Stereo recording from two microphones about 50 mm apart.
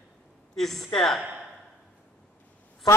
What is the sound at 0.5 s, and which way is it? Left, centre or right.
Speech, centre.